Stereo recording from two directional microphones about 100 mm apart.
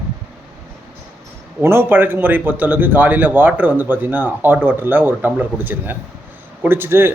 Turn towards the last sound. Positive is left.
turn(degrees=-20)  # may be behind; listen again after turning